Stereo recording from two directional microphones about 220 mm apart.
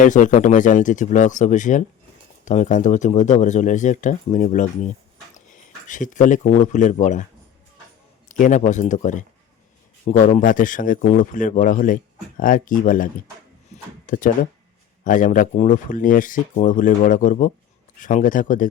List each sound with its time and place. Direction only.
0.0 s speech: 35° left (ahead or behind)
5.9 s speech: 35° left (ahead or behind)
8.3 s speech: 35° left (ahead or behind)
13.7 s a sound: 30° left (ahead or behind)
14.1 s speech: 35° left (ahead or behind)